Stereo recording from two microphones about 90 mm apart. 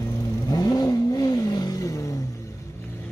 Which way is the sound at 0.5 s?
45° left (ahead or behind).